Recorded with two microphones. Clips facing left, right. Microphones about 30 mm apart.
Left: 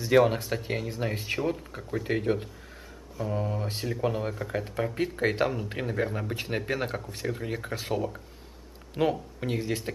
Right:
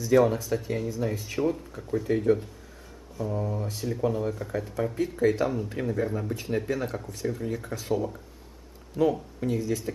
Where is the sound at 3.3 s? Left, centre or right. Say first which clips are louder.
Left 1 dB; left.